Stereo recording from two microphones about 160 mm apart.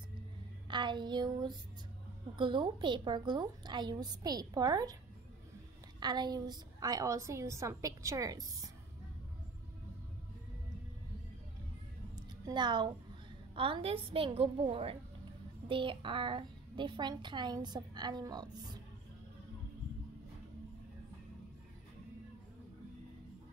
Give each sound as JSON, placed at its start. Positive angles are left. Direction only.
{"t": 0.7, "sound": "a woman's voice", "side_deg": -30}
{"t": 5.9, "sound": "a woman's voice", "side_deg": -25}
{"t": 12.4, "sound": "a woman's voice", "side_deg": -30}